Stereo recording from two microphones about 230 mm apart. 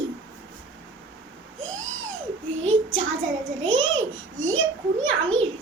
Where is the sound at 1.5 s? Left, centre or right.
Right.